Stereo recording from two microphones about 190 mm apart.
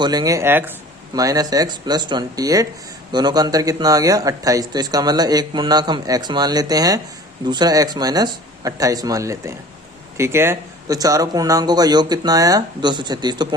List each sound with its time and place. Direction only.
0.0 s speech: 20° right (ahead or behind)